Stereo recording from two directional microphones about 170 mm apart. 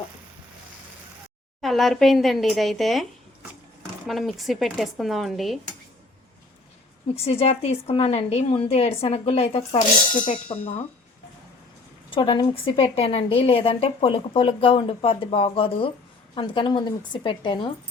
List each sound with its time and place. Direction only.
1.6 s speech: centre (ahead or behind)
7.3 s a woman's voice: 35° left (ahead or behind)
12.1 s a woman's voice: 25° left (ahead or behind)